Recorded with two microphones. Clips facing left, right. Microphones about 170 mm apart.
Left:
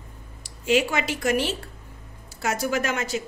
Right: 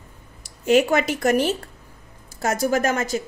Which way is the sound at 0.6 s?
50° right (ahead or behind).